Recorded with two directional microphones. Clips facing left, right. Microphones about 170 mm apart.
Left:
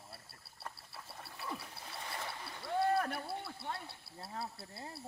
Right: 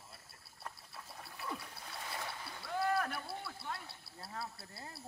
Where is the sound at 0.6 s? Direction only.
5° left (ahead or behind).